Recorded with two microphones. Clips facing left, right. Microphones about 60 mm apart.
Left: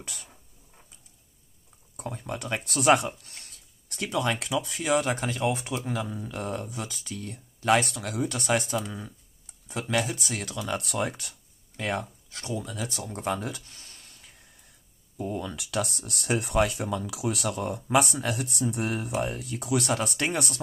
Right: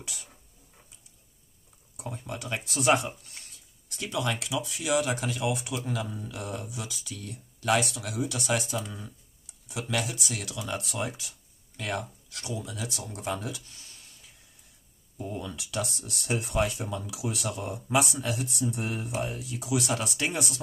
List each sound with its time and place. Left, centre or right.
0.0 s speech: left
2.0 s speech: left
3.9 s speech: left
6.0 s speech: centre
6.3 s speech: left
10.7 s speech: left
11.7 s speech: left
19.1 s speech: left